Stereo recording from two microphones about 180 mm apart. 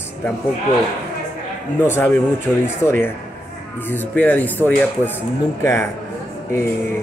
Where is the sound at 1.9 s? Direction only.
15° left (ahead or behind).